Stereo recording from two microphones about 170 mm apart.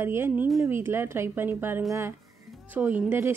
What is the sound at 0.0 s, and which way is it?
Speech, 15° right (ahead or behind).